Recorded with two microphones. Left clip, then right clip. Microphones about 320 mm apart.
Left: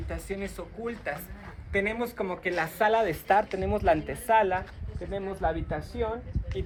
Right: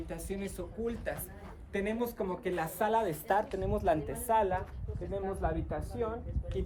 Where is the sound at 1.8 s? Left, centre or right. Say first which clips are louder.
Left 3 dB; centre.